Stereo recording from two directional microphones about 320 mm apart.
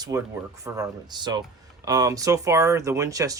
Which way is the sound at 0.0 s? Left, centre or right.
Centre.